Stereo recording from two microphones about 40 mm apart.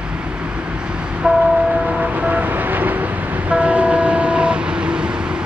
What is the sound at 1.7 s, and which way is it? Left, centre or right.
Vehicle, right.